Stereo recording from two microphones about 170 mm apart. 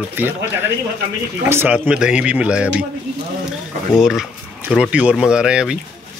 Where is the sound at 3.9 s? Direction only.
Centre (ahead or behind).